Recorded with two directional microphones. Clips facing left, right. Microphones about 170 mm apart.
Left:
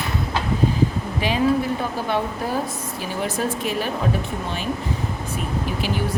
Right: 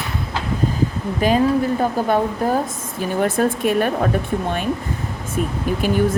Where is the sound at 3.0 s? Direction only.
50° right (ahead or behind).